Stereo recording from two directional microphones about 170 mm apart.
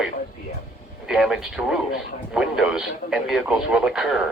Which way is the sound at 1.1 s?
5° right (ahead or behind).